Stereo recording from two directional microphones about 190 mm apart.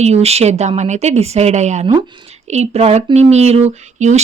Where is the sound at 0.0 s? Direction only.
35° right (ahead or behind).